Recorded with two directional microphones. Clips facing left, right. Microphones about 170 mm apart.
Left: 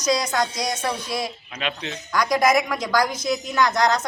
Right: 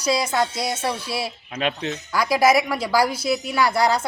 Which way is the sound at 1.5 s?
50° right (ahead or behind).